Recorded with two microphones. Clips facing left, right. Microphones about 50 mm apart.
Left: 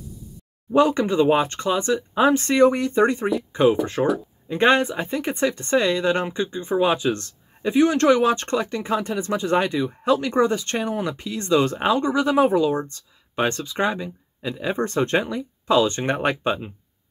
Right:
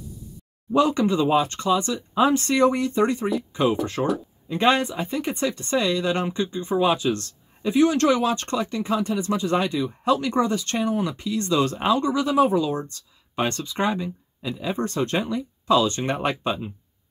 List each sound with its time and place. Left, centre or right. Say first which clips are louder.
0.7 s speech: left 2 dB; left
3.8 s speech: left 3 dB; centre
4.5 s speech: left 2 dB; left
13.4 s speech: left 2 dB; centre
14.4 s speech: left 2 dB; left